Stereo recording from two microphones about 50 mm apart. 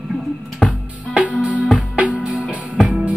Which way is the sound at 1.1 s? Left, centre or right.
Right.